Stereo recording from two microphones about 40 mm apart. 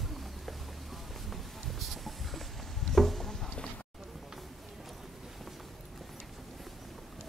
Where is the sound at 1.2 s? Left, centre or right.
Centre.